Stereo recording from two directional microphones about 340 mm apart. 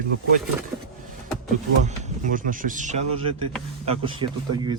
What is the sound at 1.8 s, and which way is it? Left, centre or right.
Speech, right.